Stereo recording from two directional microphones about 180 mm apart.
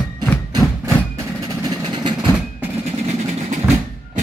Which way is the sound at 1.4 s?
25° right (ahead or behind).